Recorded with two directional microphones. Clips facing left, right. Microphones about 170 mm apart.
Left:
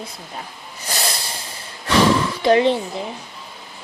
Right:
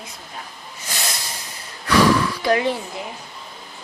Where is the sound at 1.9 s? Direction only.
25° left (ahead or behind).